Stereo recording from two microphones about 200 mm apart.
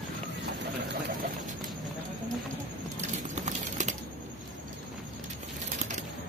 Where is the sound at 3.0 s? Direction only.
35° right (ahead or behind).